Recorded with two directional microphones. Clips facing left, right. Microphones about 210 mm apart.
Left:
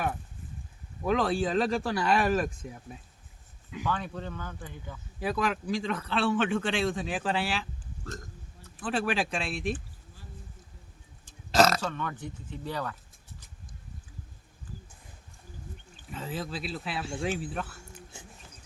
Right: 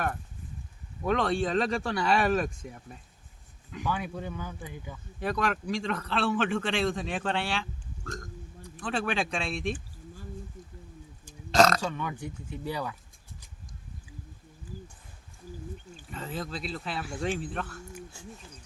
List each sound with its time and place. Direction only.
1.0 s a man's voice: centre (ahead or behind)
3.8 s speech: 10° right (ahead or behind)
5.2 s a man's voice: centre (ahead or behind)
11.5 s a man's voice: 5° left (ahead or behind)
11.8 s speech: 10° right (ahead or behind)
16.0 s a man's voice: centre (ahead or behind)
18.1 s speech: 20° left (ahead or behind)